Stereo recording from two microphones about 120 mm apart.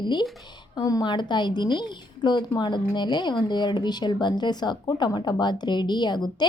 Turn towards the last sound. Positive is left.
turn(degrees=35)  # may be behind; listen again after turning